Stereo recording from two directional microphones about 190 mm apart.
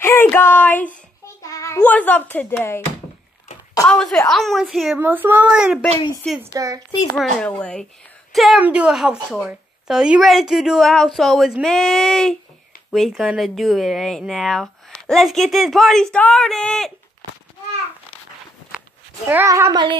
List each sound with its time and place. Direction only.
0.0 s child singing: 10° left (ahead or behind)
1.4 s speech: 15° left (ahead or behind)
3.9 s speech: 5° left (ahead or behind)
6.4 s speech: 15° right (ahead or behind)
7.2 s speech: 5° left (ahead or behind)
19.2 s speech: 15° right (ahead or behind)